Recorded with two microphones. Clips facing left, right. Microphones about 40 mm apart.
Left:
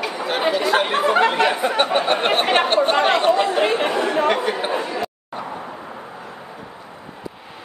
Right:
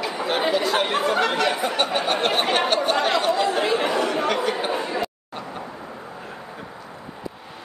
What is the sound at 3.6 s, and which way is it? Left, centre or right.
Chatter, left.